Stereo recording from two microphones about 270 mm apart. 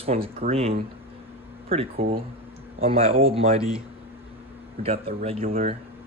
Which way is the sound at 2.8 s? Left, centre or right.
Right.